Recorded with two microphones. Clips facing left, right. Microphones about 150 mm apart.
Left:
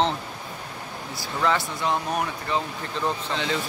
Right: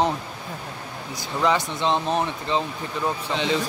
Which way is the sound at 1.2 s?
20° right (ahead or behind).